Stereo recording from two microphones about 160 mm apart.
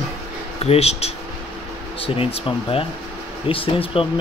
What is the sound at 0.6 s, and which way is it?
Speech, 40° left (ahead or behind).